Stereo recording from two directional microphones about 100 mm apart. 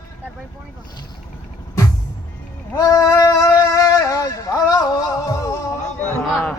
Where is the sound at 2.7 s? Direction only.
35° left (ahead or behind).